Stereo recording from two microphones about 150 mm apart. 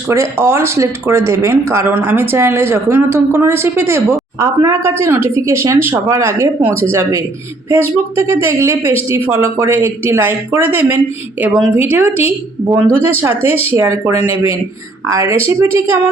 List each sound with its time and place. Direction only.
0.1 s a woman's voice: 15° right (ahead or behind)